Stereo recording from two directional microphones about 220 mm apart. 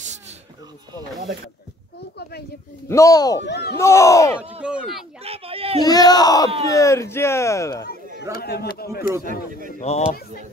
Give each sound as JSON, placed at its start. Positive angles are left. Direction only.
{"t": 2.9, "sound": "speech", "side_deg": 15}
{"t": 3.4, "sound": "speech", "side_deg": 50}
{"t": 3.7, "sound": "speech", "side_deg": 15}
{"t": 4.4, "sound": "speech", "side_deg": -5}
{"t": 5.2, "sound": "speech", "side_deg": -25}
{"t": 5.9, "sound": "speech", "side_deg": 15}
{"t": 8.2, "sound": "speech", "side_deg": 45}
{"t": 9.3, "sound": "speech", "side_deg": -40}
{"t": 9.8, "sound": "speech", "side_deg": 30}